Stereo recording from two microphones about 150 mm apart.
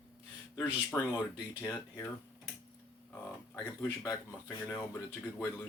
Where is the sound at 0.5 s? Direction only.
15° left (ahead or behind).